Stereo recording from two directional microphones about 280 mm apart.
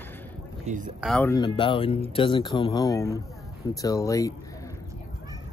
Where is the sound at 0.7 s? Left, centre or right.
Right.